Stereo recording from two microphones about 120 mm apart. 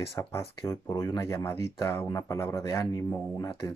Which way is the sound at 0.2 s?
25° left (ahead or behind).